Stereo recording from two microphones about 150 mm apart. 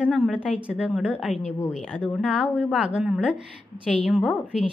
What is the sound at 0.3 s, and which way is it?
Speech, 10° right (ahead or behind).